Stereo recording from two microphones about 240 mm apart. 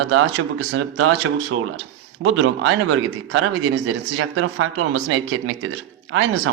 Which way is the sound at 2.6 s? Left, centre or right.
Right.